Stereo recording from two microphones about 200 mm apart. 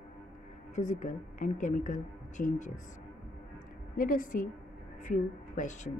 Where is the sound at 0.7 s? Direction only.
35° left (ahead or behind).